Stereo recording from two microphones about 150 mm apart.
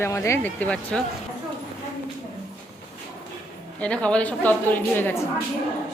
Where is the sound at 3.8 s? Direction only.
10° left (ahead or behind).